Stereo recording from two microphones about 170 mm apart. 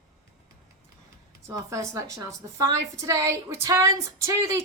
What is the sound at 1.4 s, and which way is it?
A woman's voice, 20° right (ahead or behind).